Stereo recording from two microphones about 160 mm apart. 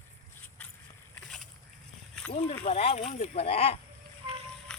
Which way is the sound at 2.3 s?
50° left (ahead or behind).